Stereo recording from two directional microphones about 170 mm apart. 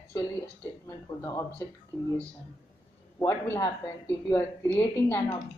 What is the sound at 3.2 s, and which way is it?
Speech, 15° left (ahead or behind).